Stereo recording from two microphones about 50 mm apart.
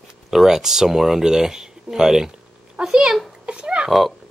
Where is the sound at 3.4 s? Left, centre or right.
Right.